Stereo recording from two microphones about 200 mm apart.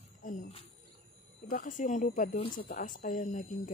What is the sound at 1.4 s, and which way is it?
Speech, 40° left (ahead or behind).